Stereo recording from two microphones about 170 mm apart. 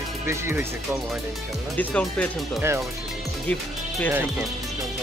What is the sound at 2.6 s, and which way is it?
Speech, 15° right (ahead or behind).